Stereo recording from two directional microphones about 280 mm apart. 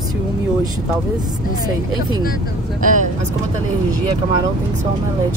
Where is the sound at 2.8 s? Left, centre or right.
Right.